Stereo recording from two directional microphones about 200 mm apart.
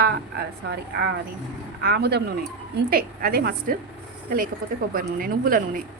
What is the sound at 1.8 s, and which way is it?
Speech, 55° right (ahead or behind).